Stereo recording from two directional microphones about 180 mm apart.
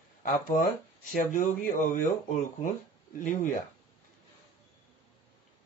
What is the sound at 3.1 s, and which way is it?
Speech, 45° left (ahead or behind).